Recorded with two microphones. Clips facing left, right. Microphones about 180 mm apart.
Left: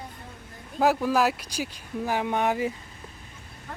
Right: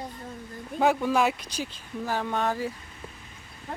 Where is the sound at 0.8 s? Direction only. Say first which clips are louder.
Left 1 dB; centre (ahead or behind); by 2.8 s 15° left (ahead or behind).